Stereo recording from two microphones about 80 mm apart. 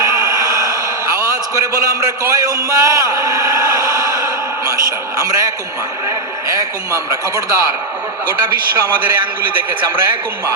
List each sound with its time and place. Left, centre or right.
0.0 s a sound: right
6.5 s a man's voice: right
8.8 s a man's voice: right